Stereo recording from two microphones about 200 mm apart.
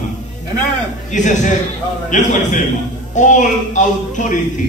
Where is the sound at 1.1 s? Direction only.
40° left (ahead or behind).